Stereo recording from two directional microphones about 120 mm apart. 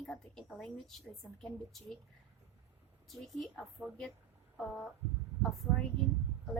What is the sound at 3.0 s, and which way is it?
Speech, centre (ahead or behind).